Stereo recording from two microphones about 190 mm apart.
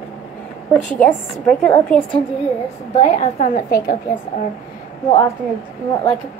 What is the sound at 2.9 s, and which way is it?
A woman's voice, 35° left (ahead or behind).